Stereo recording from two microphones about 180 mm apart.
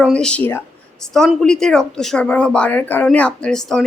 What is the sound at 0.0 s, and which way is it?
A woman's voice, 5° left (ahead or behind).